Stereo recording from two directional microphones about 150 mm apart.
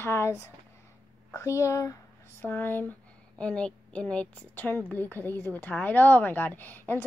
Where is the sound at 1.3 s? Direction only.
20° left (ahead or behind).